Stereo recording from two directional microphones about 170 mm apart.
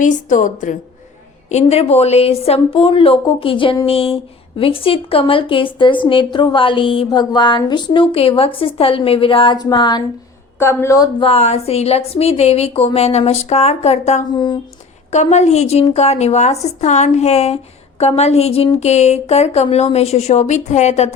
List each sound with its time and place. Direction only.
0.0 s a woman's voice: 50° left (ahead or behind); by 11.1 s 20° left (ahead or behind)
11.2 s speech: 35° left (ahead or behind)
14.3 s speech: 25° left (ahead or behind)
15.1 s speech: 40° left (ahead or behind)